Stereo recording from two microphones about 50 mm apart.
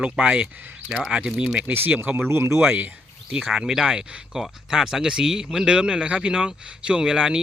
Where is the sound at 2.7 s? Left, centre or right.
Right.